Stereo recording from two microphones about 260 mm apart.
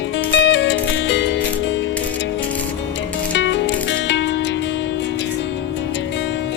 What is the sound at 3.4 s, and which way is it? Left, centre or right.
Music, left.